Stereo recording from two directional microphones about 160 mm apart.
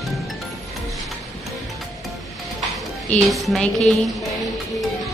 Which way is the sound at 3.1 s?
Centre (ahead or behind).